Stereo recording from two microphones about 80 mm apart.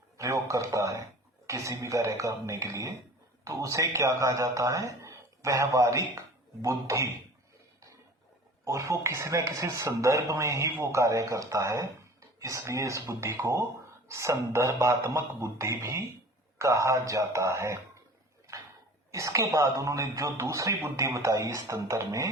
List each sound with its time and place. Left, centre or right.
0.2 s speech: right
8.6 s speech: right
19.1 s speech: right